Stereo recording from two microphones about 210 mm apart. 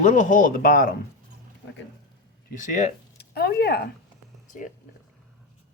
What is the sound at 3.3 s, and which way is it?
Speech, 50° left (ahead or behind).